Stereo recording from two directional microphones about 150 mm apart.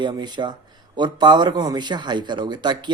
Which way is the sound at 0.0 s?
30° right (ahead or behind).